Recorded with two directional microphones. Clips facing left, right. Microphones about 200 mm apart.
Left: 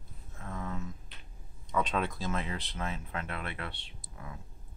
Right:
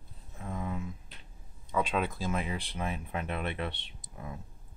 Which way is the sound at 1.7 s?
5° right (ahead or behind).